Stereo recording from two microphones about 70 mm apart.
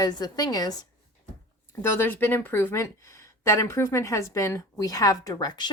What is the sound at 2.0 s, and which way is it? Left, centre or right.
Speech, left.